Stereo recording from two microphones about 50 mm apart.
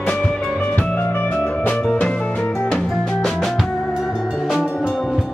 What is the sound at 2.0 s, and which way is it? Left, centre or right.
Music, left.